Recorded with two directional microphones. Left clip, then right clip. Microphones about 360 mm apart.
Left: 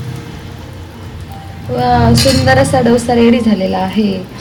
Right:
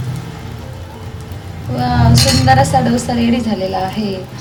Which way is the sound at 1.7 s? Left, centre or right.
Centre.